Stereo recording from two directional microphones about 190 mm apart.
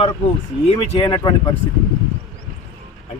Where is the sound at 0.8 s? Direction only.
25° left (ahead or behind).